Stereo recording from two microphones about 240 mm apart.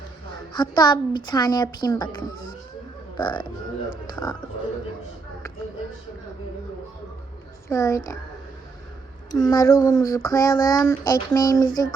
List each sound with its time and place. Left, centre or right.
0.5 s child singing: centre
3.2 s speech: centre
4.1 s child singing: centre
7.7 s child singing: centre
9.3 s child singing: centre